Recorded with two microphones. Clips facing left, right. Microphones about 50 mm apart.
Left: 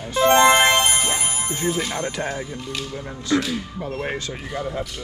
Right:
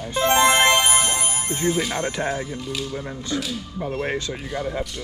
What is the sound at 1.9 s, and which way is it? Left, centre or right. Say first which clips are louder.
Speech: right 1 dB; right.